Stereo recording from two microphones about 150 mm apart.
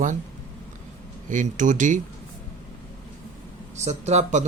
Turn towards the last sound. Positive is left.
turn(degrees=-50)  # may be behind; listen again after turning